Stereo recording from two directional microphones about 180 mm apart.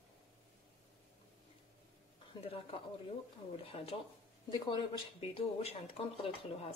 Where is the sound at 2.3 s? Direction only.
30° left (ahead or behind).